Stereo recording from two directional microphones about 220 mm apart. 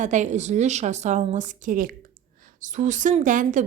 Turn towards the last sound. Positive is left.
turn(degrees=-35)  # may be behind; listen again after turning